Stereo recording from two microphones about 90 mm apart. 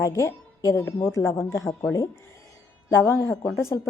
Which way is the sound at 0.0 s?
35° left (ahead or behind).